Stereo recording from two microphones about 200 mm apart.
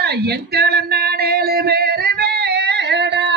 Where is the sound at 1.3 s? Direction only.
50° right (ahead or behind).